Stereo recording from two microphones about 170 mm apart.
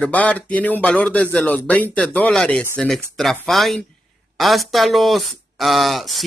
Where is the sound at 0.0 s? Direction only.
5° left (ahead or behind).